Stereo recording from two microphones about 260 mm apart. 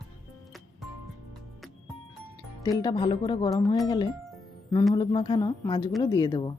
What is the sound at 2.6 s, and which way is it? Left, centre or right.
Speech, centre.